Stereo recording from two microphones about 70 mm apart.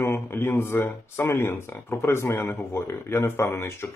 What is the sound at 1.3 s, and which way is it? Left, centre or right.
Speech, left.